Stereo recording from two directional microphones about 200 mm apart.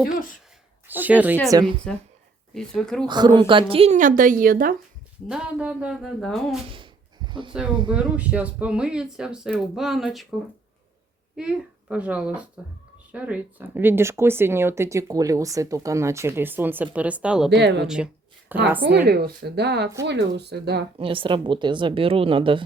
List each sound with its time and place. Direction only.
0.9 s speech: 10° right (ahead or behind)
1.5 s a woman's voice: 20° right (ahead or behind)
2.6 s speech: 5° left (ahead or behind)
3.1 s speech: 20° right (ahead or behind); by 4.7 s 45° right (ahead or behind)
5.3 s speech: 5° right (ahead or behind)
6.7 s a sound: 25° right (ahead or behind)
7.9 s speech: 5° right (ahead or behind)
11.3 s speech: 5° right (ahead or behind)
17.5 s a woman's voice: 60° right (ahead or behind)
17.8 s a sound: 5° right (ahead or behind)
18.9 s a woman's voice: 55° right (ahead or behind)
21.0 s a woman's voice: 25° right (ahead or behind)